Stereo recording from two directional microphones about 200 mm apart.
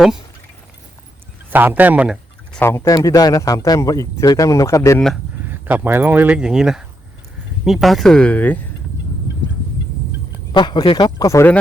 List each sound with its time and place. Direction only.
1.5 s speech: 10° right (ahead or behind)
2.5 s speech: 10° left (ahead or behind)
4.9 s speech: centre (ahead or behind)
5.5 s speech: 10° right (ahead or behind); by 8.5 s 5° left (ahead or behind)
10.5 s speech: 20° left (ahead or behind)